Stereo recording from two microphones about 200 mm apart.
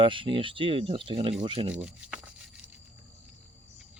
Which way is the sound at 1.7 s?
5° right (ahead or behind).